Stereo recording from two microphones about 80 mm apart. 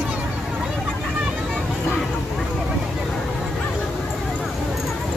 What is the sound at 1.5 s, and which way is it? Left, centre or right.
Vehicle, centre.